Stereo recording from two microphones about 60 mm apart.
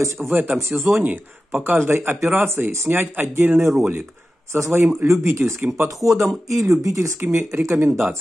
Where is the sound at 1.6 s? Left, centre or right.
Right.